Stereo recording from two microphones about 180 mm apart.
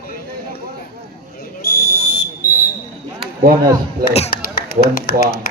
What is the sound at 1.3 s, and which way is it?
Fire alarm, 60° left (ahead or behind).